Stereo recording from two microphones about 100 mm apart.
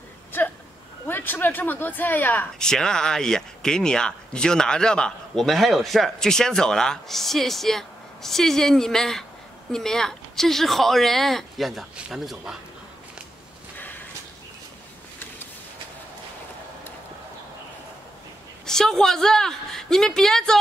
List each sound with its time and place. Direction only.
1.0 s speech: 20° left (ahead or behind)
2.6 s speech: 5° left (ahead or behind)
18.7 s speech: 5° left (ahead or behind)